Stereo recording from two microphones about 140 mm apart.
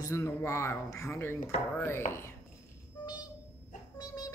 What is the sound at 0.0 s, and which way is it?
Speech, 20° left (ahead or behind).